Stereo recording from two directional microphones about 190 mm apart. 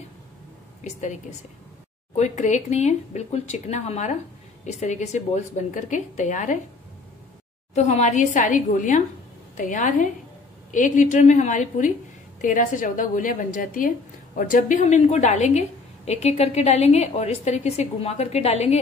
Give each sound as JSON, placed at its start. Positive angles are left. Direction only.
{"t": 2.1, "sound": "a woman's voice", "side_deg": 40}
{"t": 7.7, "sound": "a woman's voice", "side_deg": 35}